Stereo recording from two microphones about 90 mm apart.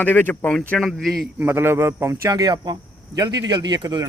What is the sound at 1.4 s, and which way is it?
Speech, 25° right (ahead or behind).